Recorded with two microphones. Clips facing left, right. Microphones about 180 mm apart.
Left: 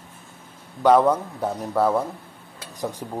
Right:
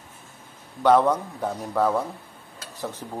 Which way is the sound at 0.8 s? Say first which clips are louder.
Left 2 dB; 10° left (ahead or behind).